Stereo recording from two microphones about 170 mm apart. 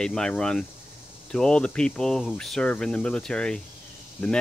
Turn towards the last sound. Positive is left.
turn(degrees=10)  # may be behind; listen again after turning